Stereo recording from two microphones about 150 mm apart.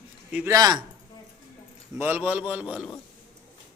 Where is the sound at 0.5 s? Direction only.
25° right (ahead or behind).